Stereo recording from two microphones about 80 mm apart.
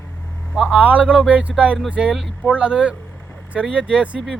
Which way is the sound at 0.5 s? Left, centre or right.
Centre.